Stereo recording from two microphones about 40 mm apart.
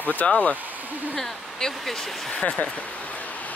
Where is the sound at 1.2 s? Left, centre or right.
Centre.